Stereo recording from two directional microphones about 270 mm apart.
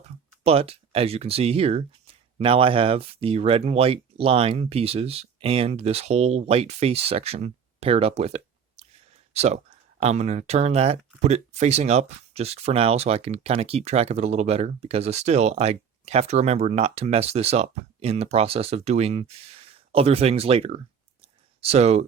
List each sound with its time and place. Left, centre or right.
0.4 s speech: right